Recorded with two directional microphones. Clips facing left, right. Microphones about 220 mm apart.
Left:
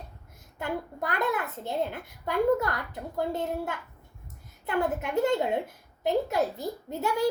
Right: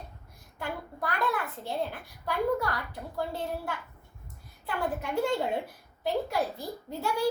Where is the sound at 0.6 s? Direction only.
20° left (ahead or behind).